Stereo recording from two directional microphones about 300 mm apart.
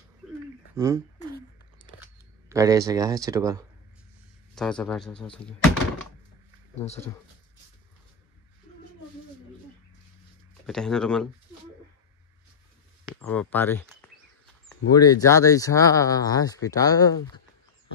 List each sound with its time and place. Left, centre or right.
0.7 s speech: centre
1.8 s a sound: centre
2.5 s speech: centre
4.6 s speech: centre
10.7 s speech: centre
13.0 s speech: centre
14.9 s speech: centre